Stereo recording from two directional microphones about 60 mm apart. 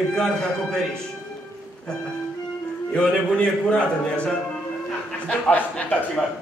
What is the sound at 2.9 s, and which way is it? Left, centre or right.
A man's voice, centre.